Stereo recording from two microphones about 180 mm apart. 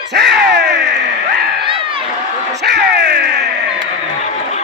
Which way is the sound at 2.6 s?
65° right (ahead or behind).